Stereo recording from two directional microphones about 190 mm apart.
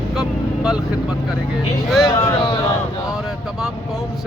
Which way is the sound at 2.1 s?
20° left (ahead or behind).